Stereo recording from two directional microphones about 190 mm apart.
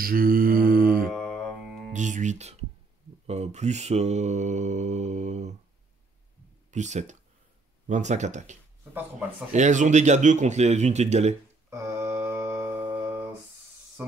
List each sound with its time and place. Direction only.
0.0 s mantra: 50° right (ahead or behind)
1.1 s music: 5° left (ahead or behind)
1.9 s speech: 40° right (ahead or behind)
3.3 s mantra: 35° right (ahead or behind)
6.7 s mantra: 40° right (ahead or behind)
11.7 s a sound: 15° right (ahead or behind)